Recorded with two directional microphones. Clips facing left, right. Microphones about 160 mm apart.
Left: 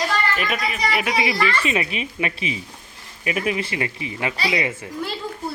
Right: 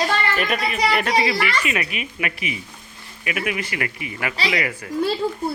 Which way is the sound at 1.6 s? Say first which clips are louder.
Left 2 dB; 30° left (ahead or behind).